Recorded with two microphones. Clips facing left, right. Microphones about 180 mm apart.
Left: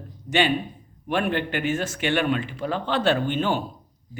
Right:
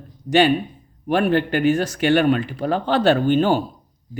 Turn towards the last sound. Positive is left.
turn(degrees=-40)  # may be behind; listen again after turning